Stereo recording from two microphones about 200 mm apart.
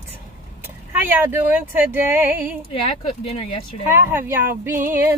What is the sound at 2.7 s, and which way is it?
Speech, 30° left (ahead or behind).